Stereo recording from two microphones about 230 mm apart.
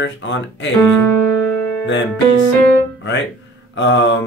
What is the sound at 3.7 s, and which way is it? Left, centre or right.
Speech, left.